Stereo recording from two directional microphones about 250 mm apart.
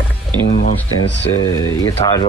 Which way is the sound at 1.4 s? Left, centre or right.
Centre.